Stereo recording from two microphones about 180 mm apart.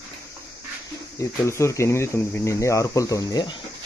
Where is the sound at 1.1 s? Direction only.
15° left (ahead or behind).